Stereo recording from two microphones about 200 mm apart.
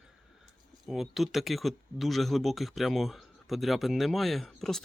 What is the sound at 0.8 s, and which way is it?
Speech, centre (ahead or behind).